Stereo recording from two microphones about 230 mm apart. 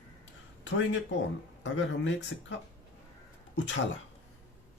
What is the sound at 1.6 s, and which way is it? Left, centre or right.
Speech, left.